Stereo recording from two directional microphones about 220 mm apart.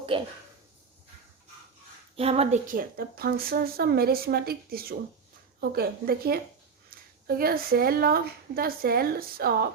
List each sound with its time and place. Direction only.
0.1 s speech: 25° right (ahead or behind)
2.1 s a woman's voice: 25° right (ahead or behind); by 9.6 s 45° right (ahead or behind)